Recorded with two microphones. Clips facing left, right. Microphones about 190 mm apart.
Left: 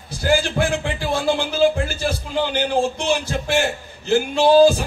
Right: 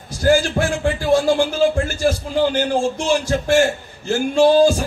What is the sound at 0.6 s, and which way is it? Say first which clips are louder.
Speech: right 1 dB; 50° right (ahead or behind).